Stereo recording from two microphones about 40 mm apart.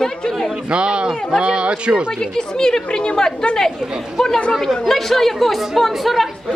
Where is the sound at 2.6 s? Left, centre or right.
Centre.